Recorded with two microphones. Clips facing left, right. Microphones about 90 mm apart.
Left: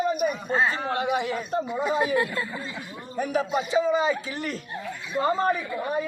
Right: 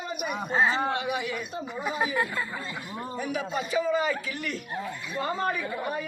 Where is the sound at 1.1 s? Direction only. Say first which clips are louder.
Left 5 dB; 35° left (ahead or behind).